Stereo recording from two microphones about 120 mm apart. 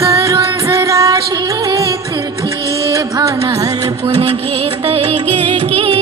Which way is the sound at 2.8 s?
25° right (ahead or behind).